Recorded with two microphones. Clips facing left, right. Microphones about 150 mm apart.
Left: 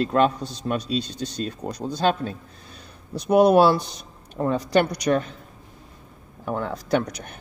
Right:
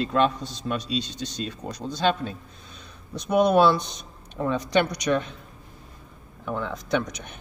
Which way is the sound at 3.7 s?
5° left (ahead or behind).